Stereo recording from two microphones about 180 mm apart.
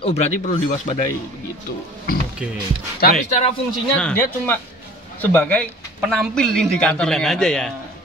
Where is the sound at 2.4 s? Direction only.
5° right (ahead or behind).